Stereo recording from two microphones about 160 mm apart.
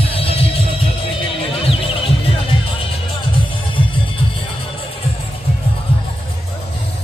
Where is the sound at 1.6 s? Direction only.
35° left (ahead or behind).